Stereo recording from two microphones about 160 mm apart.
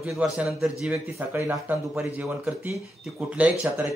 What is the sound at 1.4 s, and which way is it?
Speech, 20° right (ahead or behind).